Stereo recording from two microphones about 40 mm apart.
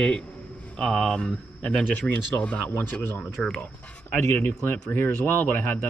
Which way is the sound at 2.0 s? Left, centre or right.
Left.